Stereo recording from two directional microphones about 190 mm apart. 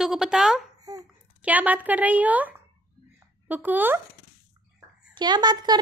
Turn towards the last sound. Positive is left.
turn(degrees=-20)  # may be behind; listen again after turning